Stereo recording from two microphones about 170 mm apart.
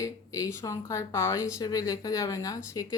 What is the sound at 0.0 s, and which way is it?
Speech, 20° left (ahead or behind).